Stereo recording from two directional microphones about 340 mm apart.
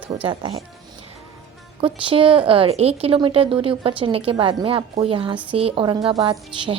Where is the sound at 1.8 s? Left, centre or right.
Centre.